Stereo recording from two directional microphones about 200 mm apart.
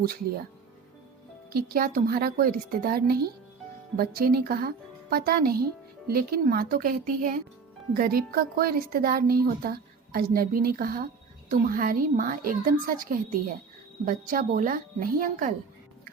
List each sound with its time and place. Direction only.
1.5 s a woman's voice: 45° right (ahead or behind)